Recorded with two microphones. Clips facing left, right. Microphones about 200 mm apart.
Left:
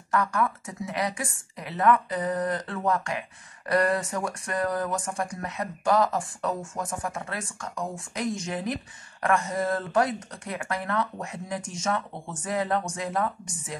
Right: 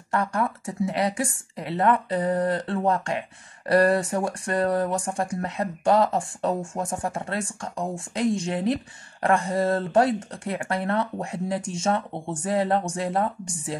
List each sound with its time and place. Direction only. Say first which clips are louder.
0.1 s a woman's voice: right 1 dB; 30° right (ahead or behind)